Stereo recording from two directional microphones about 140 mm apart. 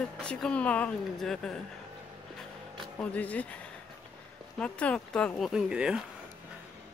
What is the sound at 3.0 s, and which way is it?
Speech, 10° left (ahead or behind).